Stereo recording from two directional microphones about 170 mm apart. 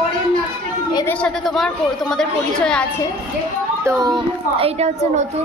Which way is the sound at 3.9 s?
25° right (ahead or behind).